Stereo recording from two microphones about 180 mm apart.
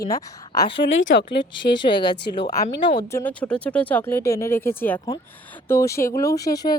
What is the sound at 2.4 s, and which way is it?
A woman's voice, 20° left (ahead or behind).